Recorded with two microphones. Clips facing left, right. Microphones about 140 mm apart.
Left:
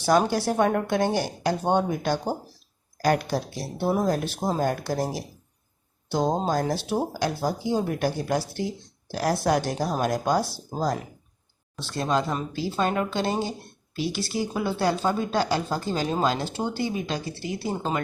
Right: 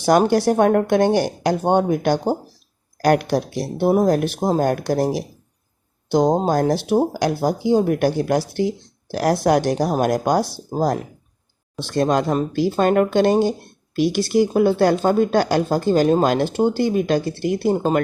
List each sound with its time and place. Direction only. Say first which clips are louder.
0.0 s speech: right 6 dB; 65° right (ahead or behind)
4.4 s speech: right 7 dB; 45° right (ahead or behind)
4.6 s speech: right 6 dB; 60° right (ahead or behind)
6.1 s speech: right 8 dB; 75° right (ahead or behind)
6.3 s speech: right 7 dB; 55° right (ahead or behind)
9.7 s speech: right 6 dB; 55° right (ahead or behind)
12.5 s speech: right 9 dB; 60° right (ahead or behind)